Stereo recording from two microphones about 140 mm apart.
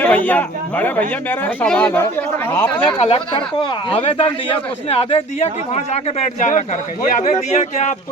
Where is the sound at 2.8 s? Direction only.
40° left (ahead or behind).